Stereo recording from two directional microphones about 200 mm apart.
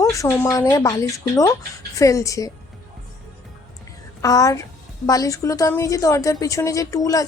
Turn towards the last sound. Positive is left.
turn(degrees=15)  # may be behind; listen again after turning